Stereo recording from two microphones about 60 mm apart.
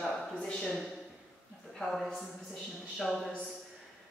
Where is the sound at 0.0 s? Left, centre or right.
Centre.